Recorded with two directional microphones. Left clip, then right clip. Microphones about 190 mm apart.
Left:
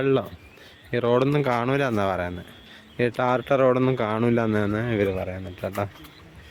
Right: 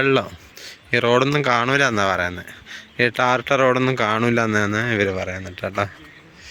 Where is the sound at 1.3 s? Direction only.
5° left (ahead or behind).